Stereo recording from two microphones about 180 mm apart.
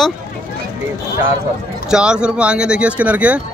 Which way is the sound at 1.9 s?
5° right (ahead or behind).